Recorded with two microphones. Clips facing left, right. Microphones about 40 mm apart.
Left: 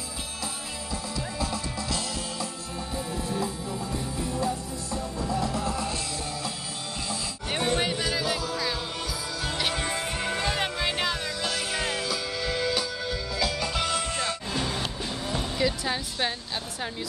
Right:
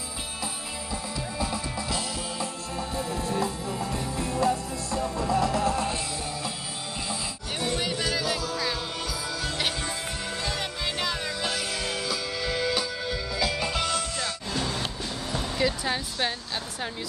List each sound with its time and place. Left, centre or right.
1.4 s music: centre
3.9 s music: right
7.5 s music: left
7.9 s music: centre
9.8 s music: left
11.2 s music: centre
13.7 s music: centre
14.0 s music: left
14.5 s music: centre
15.5 s music: centre